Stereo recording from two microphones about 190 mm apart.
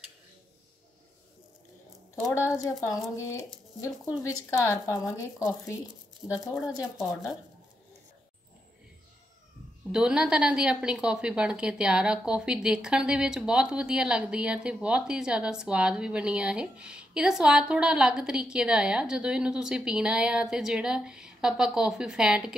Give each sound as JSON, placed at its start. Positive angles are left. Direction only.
{"t": 2.4, "sound": "a woman's voice", "side_deg": 15}
{"t": 4.5, "sound": "a woman's voice", "side_deg": 15}
{"t": 6.2, "sound": "a woman's voice", "side_deg": -5}
{"t": 9.8, "sound": "a woman's voice", "side_deg": -5}